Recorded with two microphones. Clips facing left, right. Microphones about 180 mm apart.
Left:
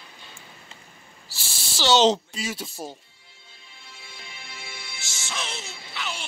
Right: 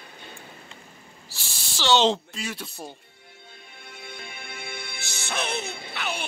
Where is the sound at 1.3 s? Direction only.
Centre (ahead or behind).